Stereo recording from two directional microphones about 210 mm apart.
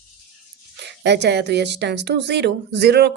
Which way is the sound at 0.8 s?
55° right (ahead or behind).